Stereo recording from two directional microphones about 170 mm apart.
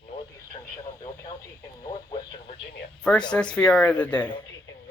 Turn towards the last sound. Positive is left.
turn(degrees=10)  # may be behind; listen again after turning